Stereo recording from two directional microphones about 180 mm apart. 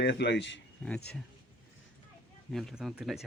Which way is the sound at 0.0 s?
70° left (ahead or behind).